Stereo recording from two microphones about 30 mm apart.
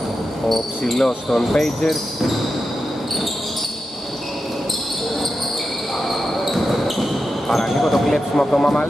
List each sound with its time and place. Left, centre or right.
0.9 s speech: centre
6.0 s basketball bounce: centre
7.4 s speech: centre
8.1 s speech: centre